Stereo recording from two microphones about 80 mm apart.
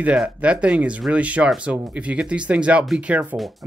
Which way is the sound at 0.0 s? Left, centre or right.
Centre.